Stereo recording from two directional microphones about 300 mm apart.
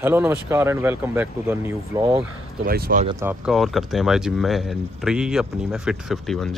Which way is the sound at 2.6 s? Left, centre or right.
Right.